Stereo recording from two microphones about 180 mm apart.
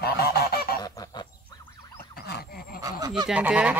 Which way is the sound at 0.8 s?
20° left (ahead or behind).